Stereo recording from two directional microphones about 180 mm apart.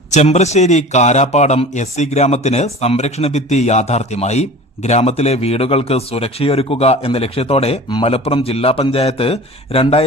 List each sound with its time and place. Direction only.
0.1 s a man's voice: 40° left (ahead or behind)